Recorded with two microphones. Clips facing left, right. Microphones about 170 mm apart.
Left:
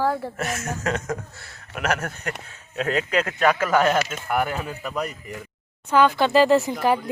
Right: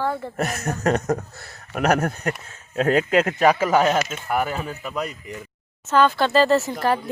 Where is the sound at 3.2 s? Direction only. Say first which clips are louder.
Right 3 dB; 20° right (ahead or behind); by 4.9 s centre (ahead or behind).